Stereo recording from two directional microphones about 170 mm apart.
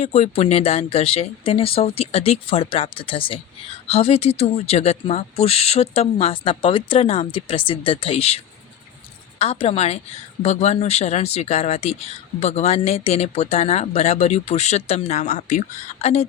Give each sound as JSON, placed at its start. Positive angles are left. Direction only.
{"t": 0.0, "sound": "speech", "side_deg": 40}
{"t": 9.4, "sound": "speech", "side_deg": 35}